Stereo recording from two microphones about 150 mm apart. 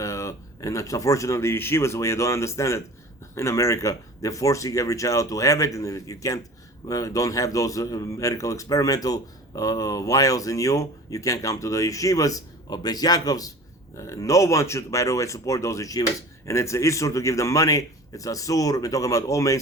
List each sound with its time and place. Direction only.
0.0 s speech: 20° left (ahead or behind)